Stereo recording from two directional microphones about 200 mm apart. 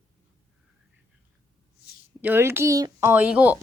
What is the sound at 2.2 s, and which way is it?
Speech, 10° right (ahead or behind).